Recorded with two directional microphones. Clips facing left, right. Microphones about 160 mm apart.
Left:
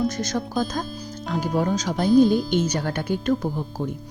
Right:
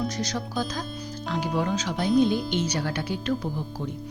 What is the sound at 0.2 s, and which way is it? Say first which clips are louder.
Speech: left 4 dB; 45° left (ahead or behind).